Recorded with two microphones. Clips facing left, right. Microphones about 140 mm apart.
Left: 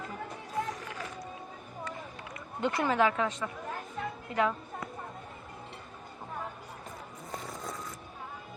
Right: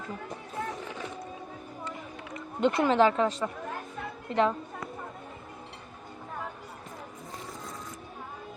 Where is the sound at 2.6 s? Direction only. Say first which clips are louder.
Right 5 dB; 20° right (ahead or behind).